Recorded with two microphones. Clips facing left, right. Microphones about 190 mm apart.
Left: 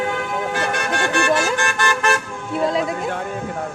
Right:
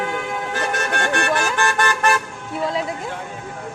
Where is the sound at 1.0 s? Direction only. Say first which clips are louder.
Left 3 dB; 55° right (ahead or behind).